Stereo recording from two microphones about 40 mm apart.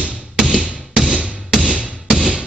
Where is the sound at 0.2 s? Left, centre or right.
Centre.